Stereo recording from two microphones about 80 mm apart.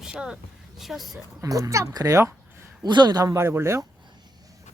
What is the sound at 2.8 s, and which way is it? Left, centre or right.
Speech, right.